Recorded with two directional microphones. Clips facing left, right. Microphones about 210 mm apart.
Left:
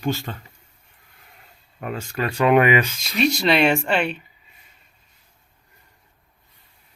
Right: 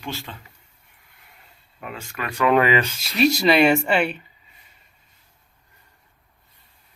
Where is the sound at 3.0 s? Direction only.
5° right (ahead or behind).